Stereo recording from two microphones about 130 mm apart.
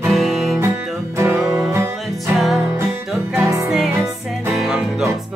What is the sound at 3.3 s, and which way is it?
Music, 25° right (ahead or behind).